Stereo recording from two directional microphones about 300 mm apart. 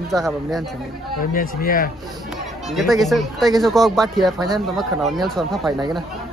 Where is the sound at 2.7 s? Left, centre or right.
Centre.